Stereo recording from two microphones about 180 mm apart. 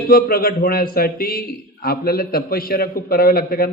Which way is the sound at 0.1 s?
55° left (ahead or behind).